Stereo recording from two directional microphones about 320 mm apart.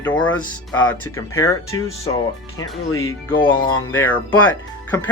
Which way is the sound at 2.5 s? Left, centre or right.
Left.